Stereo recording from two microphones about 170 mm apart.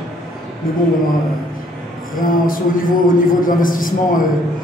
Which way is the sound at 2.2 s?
55° left (ahead or behind).